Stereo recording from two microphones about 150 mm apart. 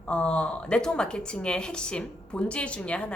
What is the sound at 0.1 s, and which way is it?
A woman's voice, 5° left (ahead or behind).